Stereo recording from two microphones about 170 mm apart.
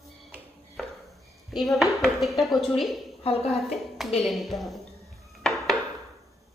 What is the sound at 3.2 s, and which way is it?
Speech, 35° left (ahead or behind).